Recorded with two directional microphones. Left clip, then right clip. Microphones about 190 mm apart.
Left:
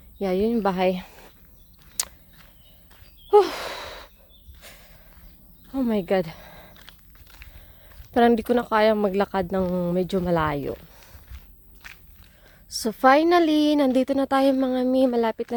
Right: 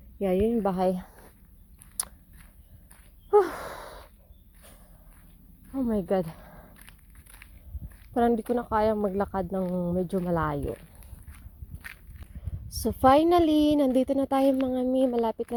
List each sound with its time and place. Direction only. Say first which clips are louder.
0.2 s a woman's voice: left 2 dB; 5° left (ahead or behind)
2.0 s a sound: left 8 dB; 10° left (ahead or behind)
3.2 s sigh: left 5 dB; 15° left (ahead or behind)
4.6 s a sound: left 9 dB; 20° left (ahead or behind)
5.7 s a woman's voice: left 4 dB; 25° left (ahead or behind)
6.7 s a sound: left 5 dB; 55° right (ahead or behind)
8.1 s a woman's voice: left 6 dB; 25° left (ahead or behind)
11.7 s biting: even; 55° right (ahead or behind)
12.6 s a woman's voice: left 3 dB; 5° left (ahead or behind)